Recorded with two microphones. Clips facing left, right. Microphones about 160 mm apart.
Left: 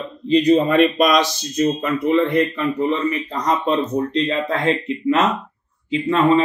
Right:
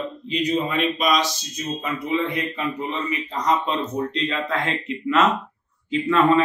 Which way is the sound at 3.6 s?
35° left (ahead or behind).